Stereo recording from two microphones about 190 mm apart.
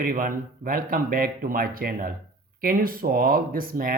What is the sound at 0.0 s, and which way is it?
Speech, 50° right (ahead or behind).